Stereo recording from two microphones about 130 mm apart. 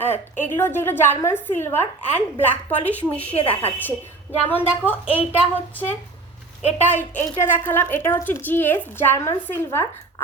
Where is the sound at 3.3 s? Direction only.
45° left (ahead or behind).